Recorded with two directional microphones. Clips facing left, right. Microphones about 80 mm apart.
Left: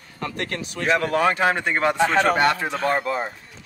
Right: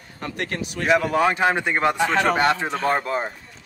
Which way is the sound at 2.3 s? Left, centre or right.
Right.